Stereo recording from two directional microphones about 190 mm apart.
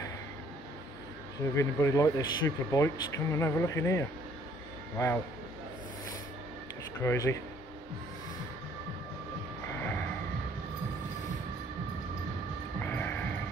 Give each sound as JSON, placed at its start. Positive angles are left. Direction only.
{"t": 1.4, "sound": "speech", "side_deg": 15}
{"t": 7.0, "sound": "speech", "side_deg": 15}
{"t": 9.7, "sound": "music", "side_deg": 10}
{"t": 12.7, "sound": "music", "side_deg": 10}